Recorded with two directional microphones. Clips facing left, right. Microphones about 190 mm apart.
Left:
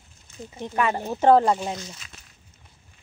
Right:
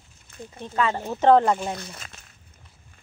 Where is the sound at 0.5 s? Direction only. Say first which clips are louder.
Left 1 dB; 15° left (ahead or behind).